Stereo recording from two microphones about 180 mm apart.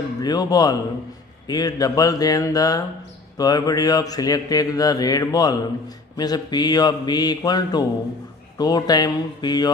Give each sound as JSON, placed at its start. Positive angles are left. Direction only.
{"t": 0.2, "sound": "mantra", "side_deg": 20}